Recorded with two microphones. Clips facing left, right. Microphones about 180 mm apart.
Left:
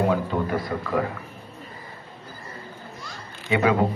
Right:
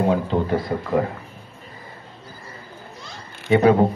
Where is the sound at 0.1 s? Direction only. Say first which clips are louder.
Right 3 dB; 25° right (ahead or behind).